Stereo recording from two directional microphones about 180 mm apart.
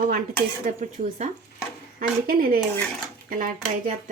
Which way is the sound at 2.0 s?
55° right (ahead or behind).